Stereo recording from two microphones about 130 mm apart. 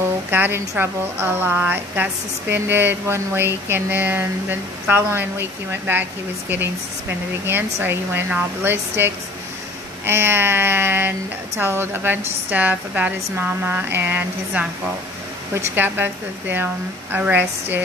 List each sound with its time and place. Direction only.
0.3 s speech: 15° right (ahead or behind)
7.4 s speech: 15° right (ahead or behind)